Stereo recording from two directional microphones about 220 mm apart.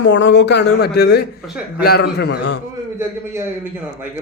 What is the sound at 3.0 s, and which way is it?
Speech, 10° right (ahead or behind).